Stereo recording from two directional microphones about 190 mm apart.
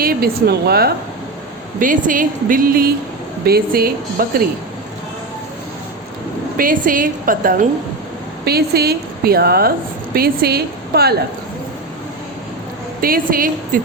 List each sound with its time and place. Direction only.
0.0 s a woman's voice: 55° right (ahead or behind)
1.8 s speech: 45° right (ahead or behind)
6.6 s a woman's voice: 45° right (ahead or behind)
13.0 s speech: 50° right (ahead or behind)